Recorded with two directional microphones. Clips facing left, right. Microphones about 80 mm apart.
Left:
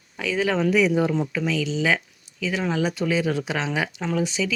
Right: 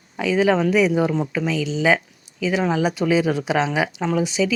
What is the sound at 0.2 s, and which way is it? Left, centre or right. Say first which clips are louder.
Speech: right 5 dB; centre.